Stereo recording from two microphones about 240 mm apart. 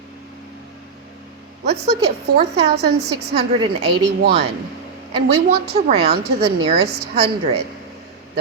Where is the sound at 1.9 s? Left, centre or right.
Right.